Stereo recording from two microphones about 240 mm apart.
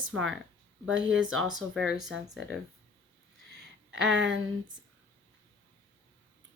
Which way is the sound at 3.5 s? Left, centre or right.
Right.